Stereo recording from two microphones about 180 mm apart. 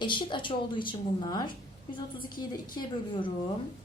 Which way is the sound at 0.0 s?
25° left (ahead or behind).